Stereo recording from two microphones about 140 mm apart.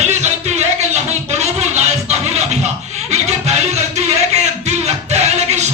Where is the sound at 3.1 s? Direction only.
50° right (ahead or behind).